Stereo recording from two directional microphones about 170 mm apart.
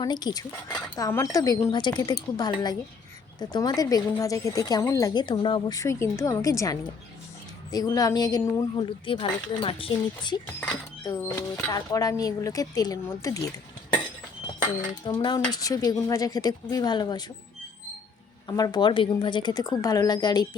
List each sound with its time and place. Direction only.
0.0 s a woman's voice: 25° left (ahead or behind)
11.0 s a woman's voice: 20° left (ahead or behind)
15.0 s a woman's voice: 25° left (ahead or behind)
18.4 s a woman's voice: 25° left (ahead or behind)